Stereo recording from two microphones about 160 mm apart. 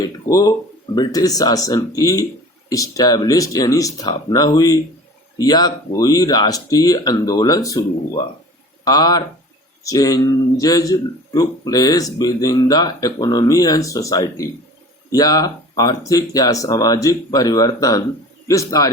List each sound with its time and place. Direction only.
0.0 s speech: 20° left (ahead or behind)